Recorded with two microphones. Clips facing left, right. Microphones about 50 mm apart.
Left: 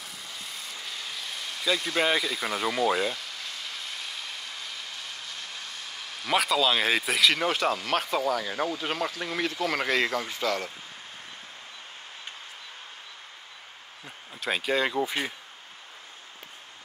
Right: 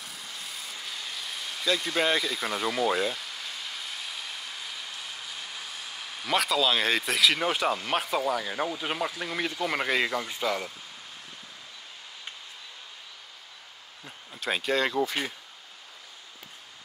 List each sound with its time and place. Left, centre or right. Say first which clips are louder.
0.0 s vehicle: even; centre
6.3 s speech: left 1 dB; centre
14.0 s speech: even; centre